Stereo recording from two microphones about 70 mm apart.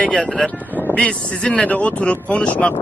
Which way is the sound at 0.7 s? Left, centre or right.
Left.